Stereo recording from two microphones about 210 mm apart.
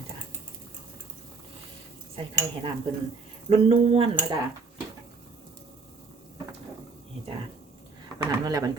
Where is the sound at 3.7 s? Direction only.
25° right (ahead or behind).